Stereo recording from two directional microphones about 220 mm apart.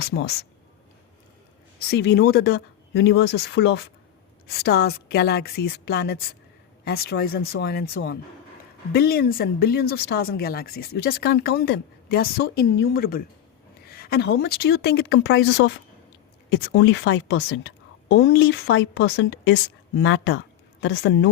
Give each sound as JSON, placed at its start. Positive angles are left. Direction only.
{"t": 0.0, "sound": "speech", "side_deg": 50}
{"t": 1.9, "sound": "speech", "side_deg": 50}